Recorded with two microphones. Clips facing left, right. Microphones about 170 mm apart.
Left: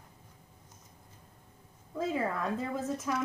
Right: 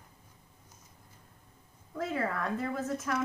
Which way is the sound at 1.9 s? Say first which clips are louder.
Left 1 dB; 15° left (ahead or behind).